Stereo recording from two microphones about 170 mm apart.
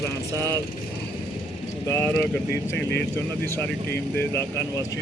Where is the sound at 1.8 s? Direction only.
15° left (ahead or behind).